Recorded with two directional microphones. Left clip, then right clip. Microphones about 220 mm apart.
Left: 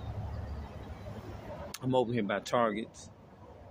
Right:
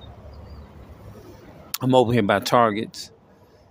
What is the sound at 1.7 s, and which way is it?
Speech, 50° right (ahead or behind).